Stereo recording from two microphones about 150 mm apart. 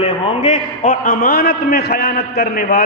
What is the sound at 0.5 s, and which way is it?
A man's voice, 65° left (ahead or behind).